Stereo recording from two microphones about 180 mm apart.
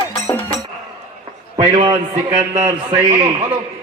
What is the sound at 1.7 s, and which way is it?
Speech, 35° right (ahead or behind).